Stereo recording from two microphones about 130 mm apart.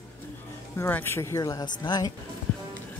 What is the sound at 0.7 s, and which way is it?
A woman's voice, 15° left (ahead or behind).